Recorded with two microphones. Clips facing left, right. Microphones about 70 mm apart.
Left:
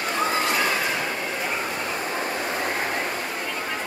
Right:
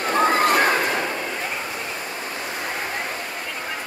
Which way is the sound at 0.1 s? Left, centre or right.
Right.